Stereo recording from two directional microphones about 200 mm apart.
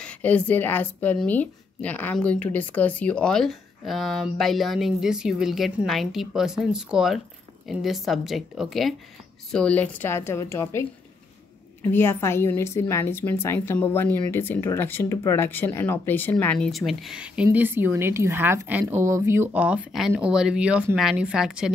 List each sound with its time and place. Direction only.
0.0 s a woman's voice: 5° left (ahead or behind)